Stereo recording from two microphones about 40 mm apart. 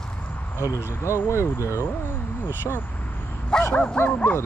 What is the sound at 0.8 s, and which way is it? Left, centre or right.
Speech, left.